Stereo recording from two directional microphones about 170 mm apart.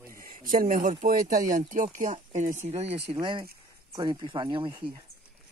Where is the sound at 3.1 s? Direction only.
30° right (ahead or behind).